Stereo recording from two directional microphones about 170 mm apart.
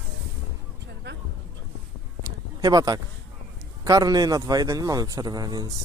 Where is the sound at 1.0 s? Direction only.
80° right.